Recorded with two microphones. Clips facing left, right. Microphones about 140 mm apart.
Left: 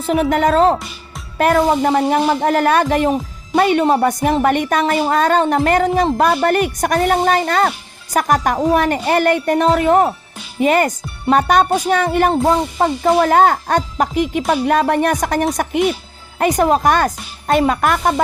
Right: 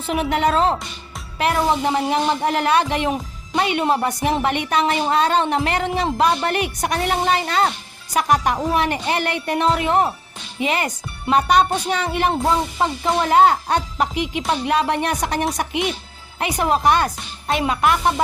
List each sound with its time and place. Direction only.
0.0 s speech: 40° left (ahead or behind)
17.4 s music: 45° left (ahead or behind)